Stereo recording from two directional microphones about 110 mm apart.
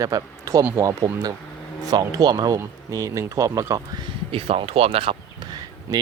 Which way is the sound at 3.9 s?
60° right (ahead or behind).